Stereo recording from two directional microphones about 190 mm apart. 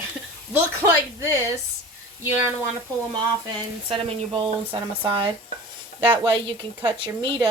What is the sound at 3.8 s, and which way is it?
Speech, 30° right (ahead or behind).